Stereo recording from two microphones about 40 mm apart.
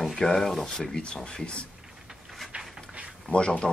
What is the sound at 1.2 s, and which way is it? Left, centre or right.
Speech, left.